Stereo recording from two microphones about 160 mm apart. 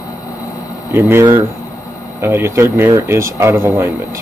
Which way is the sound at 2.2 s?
15° right (ahead or behind).